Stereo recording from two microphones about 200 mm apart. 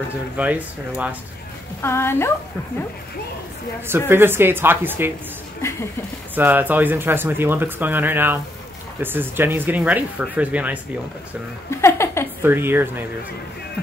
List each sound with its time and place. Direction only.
0.4 s speech: 5° right (ahead or behind)
1.8 s a woman's voice: 10° left (ahead or behind)
4.1 s speech: 10° right (ahead or behind)
5.6 s a sound: 15° left (ahead or behind)
6.3 s speech: 10° right (ahead or behind)
11.7 s a woman's voice: 15° left (ahead or behind)
12.4 s speech: 10° right (ahead or behind)